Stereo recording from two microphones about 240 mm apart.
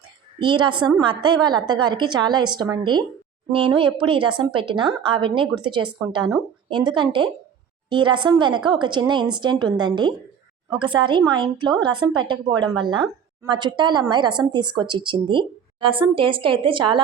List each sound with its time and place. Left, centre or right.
0.3 s a woman's voice: centre